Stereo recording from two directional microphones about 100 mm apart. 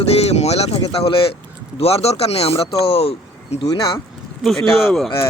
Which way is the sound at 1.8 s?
85° left.